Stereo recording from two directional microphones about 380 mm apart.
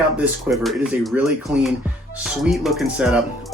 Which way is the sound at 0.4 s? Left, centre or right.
Centre.